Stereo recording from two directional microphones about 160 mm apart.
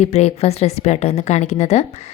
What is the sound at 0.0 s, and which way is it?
A woman's voice, 40° left (ahead or behind).